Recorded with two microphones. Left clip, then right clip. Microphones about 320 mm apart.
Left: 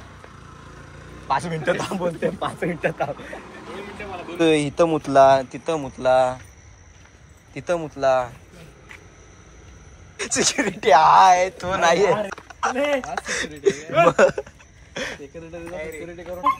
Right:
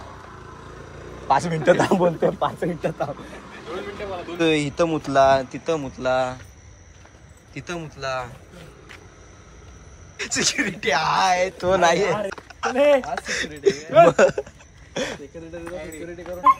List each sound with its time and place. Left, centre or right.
1.2 s speech: centre
1.8 s speech: right
2.1 s speech: centre
2.4 s speech: centre
4.4 s speech: centre
7.5 s speech: centre
10.1 s speech: centre
12.4 s a sound: centre
12.8 s speech: centre